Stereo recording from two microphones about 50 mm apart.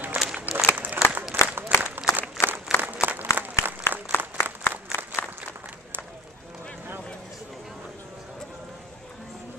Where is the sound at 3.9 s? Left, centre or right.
Left.